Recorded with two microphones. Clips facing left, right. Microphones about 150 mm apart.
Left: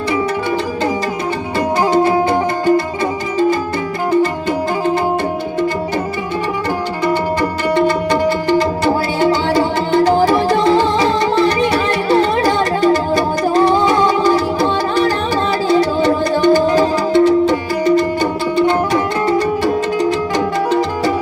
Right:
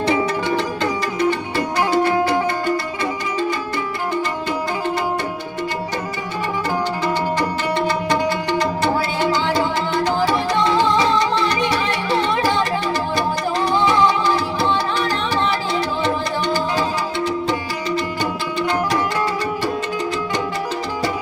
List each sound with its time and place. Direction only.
2.0 s music: 25° left (ahead or behind)
2.3 s music: 45° left (ahead or behind)
9.2 s music: 50° left (ahead or behind)
16.4 s music: 50° left (ahead or behind)